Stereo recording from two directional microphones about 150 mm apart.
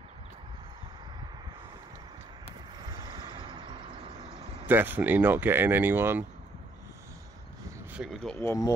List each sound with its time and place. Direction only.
2.9 s vehicle: 30° right (ahead or behind)
4.6 s speech: 15° right (ahead or behind)
7.9 s speech: centre (ahead or behind)
8.4 s speech: 20° left (ahead or behind)